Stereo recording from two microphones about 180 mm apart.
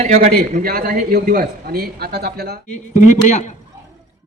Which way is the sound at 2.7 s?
40° left (ahead or behind).